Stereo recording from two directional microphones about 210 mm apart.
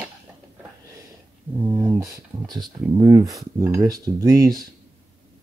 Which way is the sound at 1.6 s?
15° right (ahead or behind).